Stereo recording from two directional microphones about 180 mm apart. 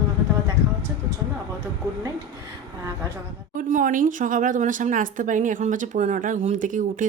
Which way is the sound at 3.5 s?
45° right (ahead or behind).